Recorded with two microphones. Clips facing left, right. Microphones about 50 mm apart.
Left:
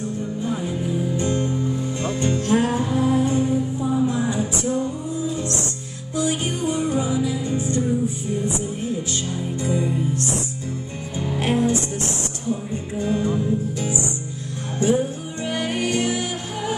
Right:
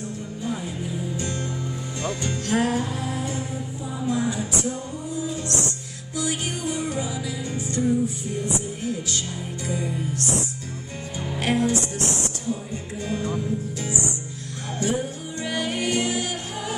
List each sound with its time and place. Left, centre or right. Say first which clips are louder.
1.1 s music: left 7 dB; left
8.8 s speech: left 3 dB; left
11.4 s music: left 2 dB; left
13.0 s music: left 5 dB; left